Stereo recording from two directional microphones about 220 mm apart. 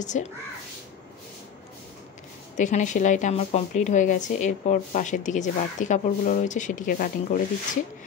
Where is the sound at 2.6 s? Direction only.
35° left (ahead or behind).